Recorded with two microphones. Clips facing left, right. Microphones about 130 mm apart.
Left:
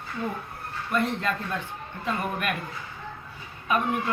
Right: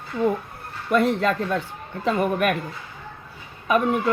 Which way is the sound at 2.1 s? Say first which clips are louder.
Right 8 dB; 90° right.